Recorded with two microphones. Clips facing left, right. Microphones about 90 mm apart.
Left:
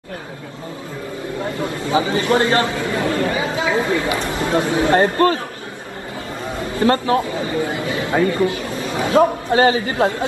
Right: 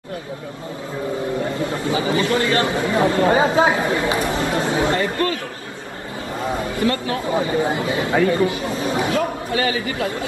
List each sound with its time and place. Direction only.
1.6 s speech: 25° left (ahead or behind)
2.7 s speech: 25° right (ahead or behind)
3.3 s speech: 35° right (ahead or behind)
3.9 s speech: 25° right (ahead or behind)
4.9 s a man's voice: 40° left (ahead or behind)
6.8 s a man's voice: 35° left (ahead or behind)
7.2 s speech: 25° right (ahead or behind)
9.1 s a man's voice: 30° left (ahead or behind)